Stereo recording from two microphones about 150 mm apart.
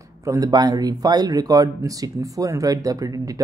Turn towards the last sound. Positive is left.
turn(degrees=-25)  # may be behind; listen again after turning